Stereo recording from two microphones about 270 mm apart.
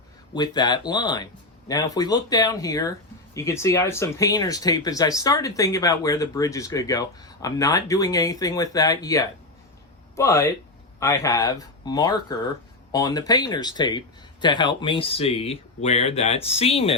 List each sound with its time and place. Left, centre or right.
0.3 s speech: centre